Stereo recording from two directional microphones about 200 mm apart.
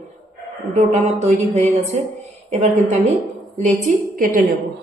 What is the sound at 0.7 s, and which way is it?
Speech, 35° right (ahead or behind).